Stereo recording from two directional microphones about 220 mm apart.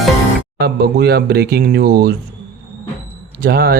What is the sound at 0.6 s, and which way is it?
Speech, 45° right (ahead or behind).